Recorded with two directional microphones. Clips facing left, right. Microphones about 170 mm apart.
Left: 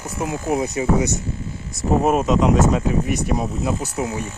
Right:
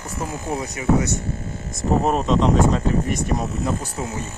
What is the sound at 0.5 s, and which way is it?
Speech, 25° left (ahead or behind).